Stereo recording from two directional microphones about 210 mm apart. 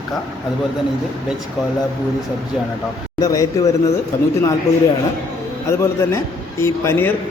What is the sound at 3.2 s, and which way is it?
Speech, 15° left (ahead or behind).